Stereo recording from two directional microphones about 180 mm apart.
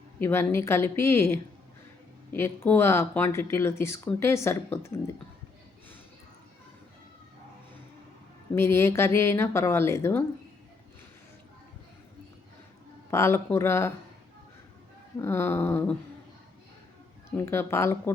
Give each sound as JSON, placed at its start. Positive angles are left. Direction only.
{"t": 0.2, "sound": "speech", "side_deg": 15}
{"t": 8.5, "sound": "speech", "side_deg": 15}
{"t": 13.1, "sound": "speech", "side_deg": 15}
{"t": 15.2, "sound": "speech", "side_deg": 15}
{"t": 17.3, "sound": "speech", "side_deg": 15}